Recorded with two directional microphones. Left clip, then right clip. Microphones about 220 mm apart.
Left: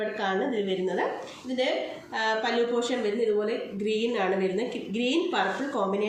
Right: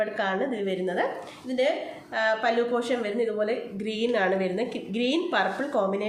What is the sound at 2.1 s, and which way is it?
A woman's voice, 35° right (ahead or behind).